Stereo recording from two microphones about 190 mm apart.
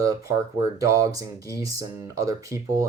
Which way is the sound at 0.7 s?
20° right (ahead or behind).